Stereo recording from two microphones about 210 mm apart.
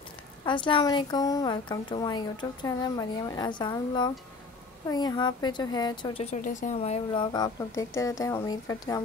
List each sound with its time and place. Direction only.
0.5 s a woman's voice: 25° left (ahead or behind)
6.3 s speech: 35° left (ahead or behind)
7.3 s speech: 15° left (ahead or behind)